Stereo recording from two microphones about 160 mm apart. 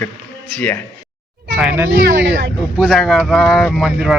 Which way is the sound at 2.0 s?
90° right.